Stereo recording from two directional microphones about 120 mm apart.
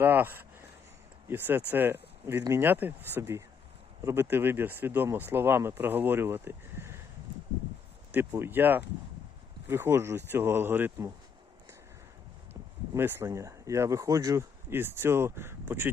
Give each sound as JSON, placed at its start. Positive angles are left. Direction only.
{"t": 0.0, "sound": "speech", "side_deg": -15}
{"t": 8.1, "sound": "speech", "side_deg": -20}
{"t": 12.9, "sound": "speech", "side_deg": -20}